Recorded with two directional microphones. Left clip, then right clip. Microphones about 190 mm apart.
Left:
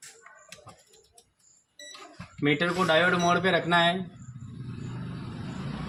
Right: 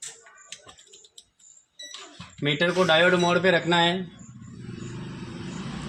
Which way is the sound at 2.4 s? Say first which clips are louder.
Right 3 dB; 25° right (ahead or behind).